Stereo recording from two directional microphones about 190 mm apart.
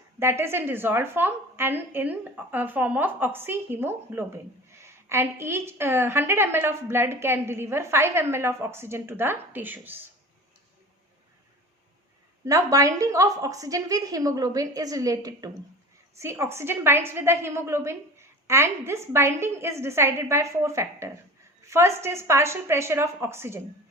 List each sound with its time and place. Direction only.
0.2 s a woman's voice: 15° right (ahead or behind)
12.5 s a woman's voice: 15° right (ahead or behind)